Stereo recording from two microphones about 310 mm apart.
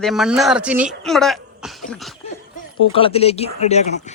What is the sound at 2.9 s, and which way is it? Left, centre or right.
Speech, centre.